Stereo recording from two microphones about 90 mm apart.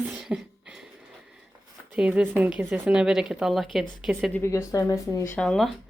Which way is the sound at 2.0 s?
10° right (ahead or behind).